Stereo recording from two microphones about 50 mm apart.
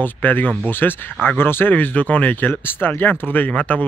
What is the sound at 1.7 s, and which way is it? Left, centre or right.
Speech, left.